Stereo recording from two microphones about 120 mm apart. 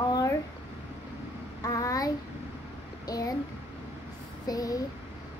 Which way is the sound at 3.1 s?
30° left (ahead or behind).